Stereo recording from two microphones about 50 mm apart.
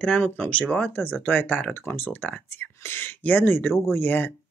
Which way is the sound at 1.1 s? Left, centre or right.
Left.